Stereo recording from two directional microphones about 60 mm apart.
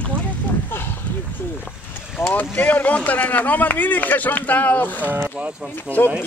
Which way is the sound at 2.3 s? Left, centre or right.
Left.